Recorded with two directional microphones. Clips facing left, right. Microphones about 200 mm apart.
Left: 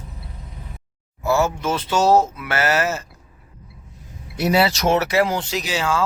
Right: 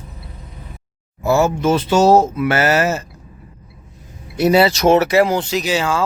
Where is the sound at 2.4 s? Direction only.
5° right (ahead or behind).